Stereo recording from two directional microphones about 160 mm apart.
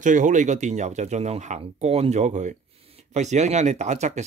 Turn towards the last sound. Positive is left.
turn(degrees=-45)  # may be behind; listen again after turning